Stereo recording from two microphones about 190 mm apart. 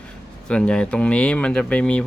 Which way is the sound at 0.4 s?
5° left (ahead or behind).